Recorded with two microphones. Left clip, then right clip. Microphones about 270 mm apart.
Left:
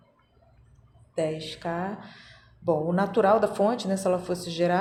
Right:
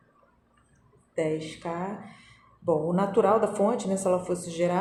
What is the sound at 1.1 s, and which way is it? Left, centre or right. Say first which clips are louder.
Speech: even; left.